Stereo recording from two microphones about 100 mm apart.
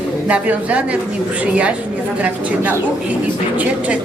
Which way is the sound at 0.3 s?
15° right (ahead or behind).